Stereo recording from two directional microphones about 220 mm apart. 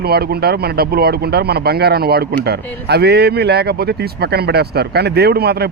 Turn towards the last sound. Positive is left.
turn(degrees=-45)  # may be behind; listen again after turning